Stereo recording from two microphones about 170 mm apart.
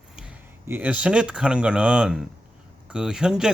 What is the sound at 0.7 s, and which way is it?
Speech, 10° right (ahead or behind).